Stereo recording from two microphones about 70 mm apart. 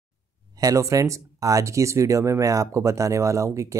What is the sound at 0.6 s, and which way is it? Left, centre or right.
Speech, right.